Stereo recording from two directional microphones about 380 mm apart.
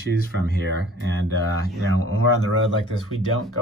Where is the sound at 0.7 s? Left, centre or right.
Right.